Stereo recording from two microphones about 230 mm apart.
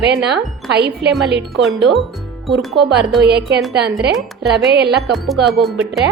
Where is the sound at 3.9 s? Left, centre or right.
Centre.